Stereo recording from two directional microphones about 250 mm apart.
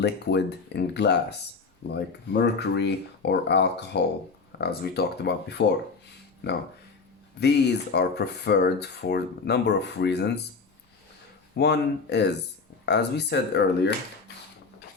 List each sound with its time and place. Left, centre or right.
0.0 s speech: left
7.3 s speech: left
11.5 s speech: left